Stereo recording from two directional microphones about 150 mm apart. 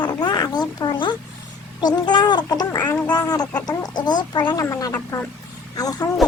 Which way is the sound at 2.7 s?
15° left (ahead or behind).